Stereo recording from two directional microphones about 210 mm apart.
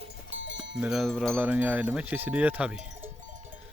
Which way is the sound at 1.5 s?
10° right (ahead or behind).